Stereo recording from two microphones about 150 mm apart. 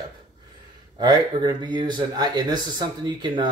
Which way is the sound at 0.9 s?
30° right (ahead or behind).